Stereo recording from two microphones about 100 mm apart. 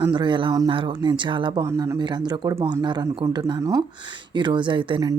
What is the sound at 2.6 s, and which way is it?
Speech, 50° right (ahead or behind).